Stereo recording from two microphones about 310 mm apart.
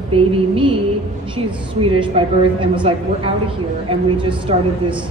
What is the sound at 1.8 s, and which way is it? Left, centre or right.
A woman's voice, centre.